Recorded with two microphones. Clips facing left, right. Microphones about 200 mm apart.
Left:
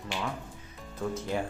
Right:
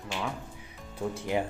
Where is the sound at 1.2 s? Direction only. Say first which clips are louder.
Right 4 dB; 15° right (ahead or behind).